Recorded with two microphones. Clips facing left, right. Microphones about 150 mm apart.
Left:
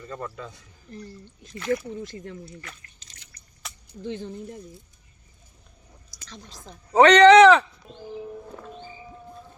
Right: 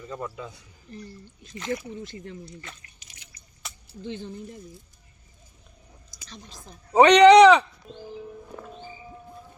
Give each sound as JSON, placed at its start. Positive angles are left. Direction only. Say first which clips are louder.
{"t": 0.0, "sound": "a man's voice", "louder": "right 1 dB", "side_deg": -10}
{"t": 1.5, "sound": "speech", "louder": "left 4 dB", "side_deg": -20}
{"t": 2.1, "sound": "speech", "louder": "left 1 dB", "side_deg": 45}
{"t": 2.7, "sound": "speech", "louder": "even", "side_deg": -25}
{"t": 3.0, "sound": "drip", "louder": "even", "side_deg": -10}
{"t": 4.0, "sound": "speech", "louder": "left 2 dB", "side_deg": 45}
{"t": 6.9, "sound": "speech", "louder": "even", "side_deg": -15}
{"t": 7.3, "sound": "a sound", "louder": "even", "side_deg": 0}